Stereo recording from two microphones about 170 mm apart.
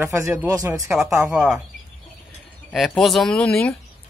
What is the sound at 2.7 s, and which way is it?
Speech, centre (ahead or behind).